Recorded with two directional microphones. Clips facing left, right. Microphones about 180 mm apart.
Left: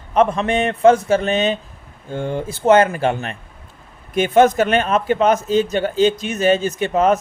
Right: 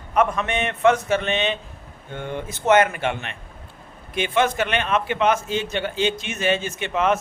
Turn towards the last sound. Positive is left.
turn(degrees=40)  # may be behind; listen again after turning